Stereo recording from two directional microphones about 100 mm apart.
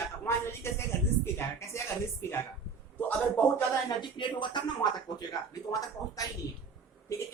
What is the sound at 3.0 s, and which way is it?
Speech, 15° left (ahead or behind).